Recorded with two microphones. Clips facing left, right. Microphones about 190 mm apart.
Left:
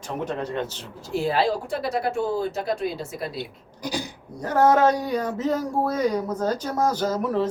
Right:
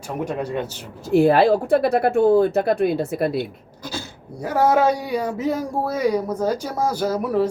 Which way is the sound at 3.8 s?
15° left (ahead or behind).